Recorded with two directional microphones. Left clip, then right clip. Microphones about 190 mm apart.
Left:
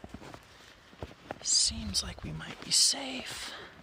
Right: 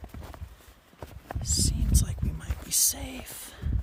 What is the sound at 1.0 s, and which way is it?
Clip-clop, 20° right (ahead or behind).